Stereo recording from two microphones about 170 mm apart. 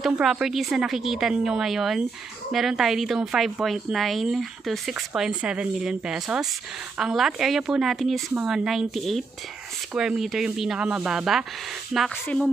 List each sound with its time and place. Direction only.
0.0 s a woman's voice: 5° right (ahead or behind)